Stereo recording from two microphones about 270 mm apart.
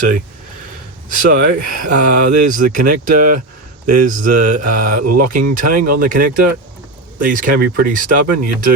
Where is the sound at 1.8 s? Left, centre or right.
Right.